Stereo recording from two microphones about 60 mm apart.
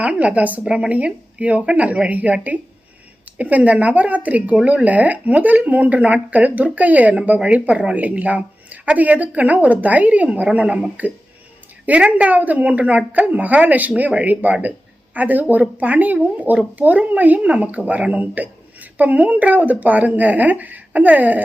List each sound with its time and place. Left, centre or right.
0.0 s a woman's voice: right